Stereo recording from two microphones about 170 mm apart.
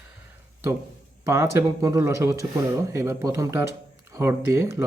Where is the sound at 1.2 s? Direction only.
15° right (ahead or behind).